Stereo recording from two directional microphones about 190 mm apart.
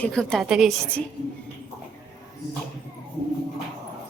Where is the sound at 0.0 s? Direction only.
5° left (ahead or behind).